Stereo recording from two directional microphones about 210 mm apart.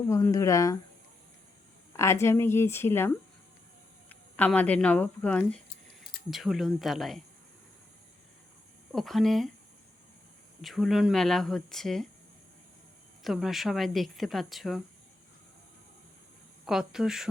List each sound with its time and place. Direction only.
0.1 s a woman's voice: 15° left (ahead or behind)
1.9 s a woman's voice: 15° left (ahead or behind)
4.1 s a woman's voice: 5° left (ahead or behind)
8.9 s a woman's voice: centre (ahead or behind)
10.6 s a woman's voice: centre (ahead or behind)
13.2 s a woman's voice: centre (ahead or behind)
16.6 s a woman's voice: centre (ahead or behind)